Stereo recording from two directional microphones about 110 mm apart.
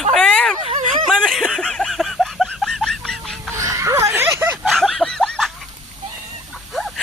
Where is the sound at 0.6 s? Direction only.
75° right (ahead or behind).